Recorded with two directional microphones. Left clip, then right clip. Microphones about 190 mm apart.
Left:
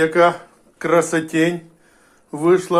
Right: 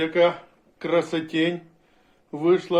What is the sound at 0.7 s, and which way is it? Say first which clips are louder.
Speech: left 7 dB; 10° left (ahead or behind).